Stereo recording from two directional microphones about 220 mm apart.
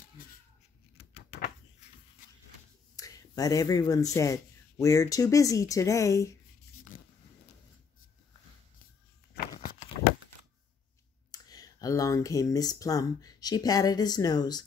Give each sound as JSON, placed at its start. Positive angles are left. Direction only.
{"t": 0.9, "sound": "a sound", "side_deg": 45}
{"t": 3.0, "sound": "speech", "side_deg": 15}
{"t": 6.9, "sound": "zipper", "side_deg": 40}
{"t": 9.6, "sound": "horse", "side_deg": 40}
{"t": 11.3, "sound": "speech", "side_deg": 15}